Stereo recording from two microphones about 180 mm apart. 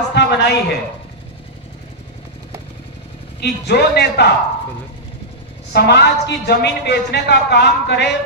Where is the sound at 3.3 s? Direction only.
65° left (ahead or behind).